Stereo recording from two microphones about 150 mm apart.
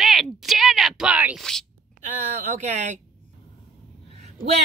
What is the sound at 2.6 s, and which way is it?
Speech, 50° right (ahead or behind).